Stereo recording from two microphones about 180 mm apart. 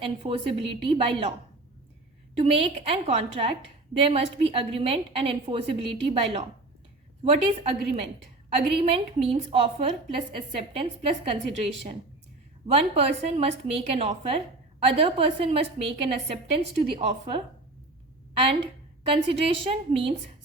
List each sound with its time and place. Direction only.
0.0 s a woman's voice: 30° right (ahead or behind)
2.4 s a woman's voice: 35° right (ahead or behind)
19.1 s a woman's voice: 30° right (ahead or behind)